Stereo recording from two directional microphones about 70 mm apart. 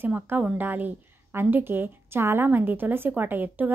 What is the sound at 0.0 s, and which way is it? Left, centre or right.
Speech, right.